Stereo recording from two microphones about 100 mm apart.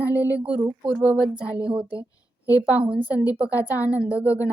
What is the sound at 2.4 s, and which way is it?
A woman's voice, 15° right (ahead or behind).